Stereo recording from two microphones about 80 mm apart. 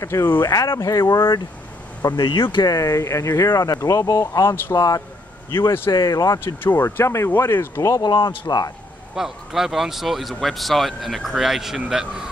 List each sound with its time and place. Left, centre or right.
0.0 s speech: left
2.7 s speech: left
5.5 s speech: left
5.9 s speech: left
6.4 s speech: left
8.0 s speech: left
9.1 s speech: centre